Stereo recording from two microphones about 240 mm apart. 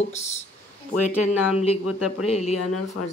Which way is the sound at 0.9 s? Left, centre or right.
Left.